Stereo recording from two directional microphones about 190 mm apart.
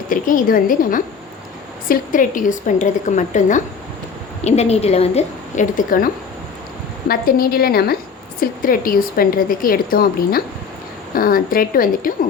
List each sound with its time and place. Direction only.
0.1 s a woman's voice: 45° left (ahead or behind)
7.1 s a woman's voice: 50° left (ahead or behind)